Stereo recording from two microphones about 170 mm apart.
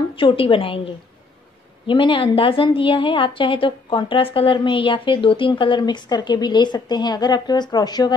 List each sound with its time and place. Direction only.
0.1 s a woman's voice: 30° left (ahead or behind)
1.9 s a woman's voice: 30° left (ahead or behind)